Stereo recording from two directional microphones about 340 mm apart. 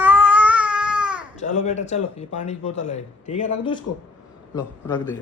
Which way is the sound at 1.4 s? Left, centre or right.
Centre.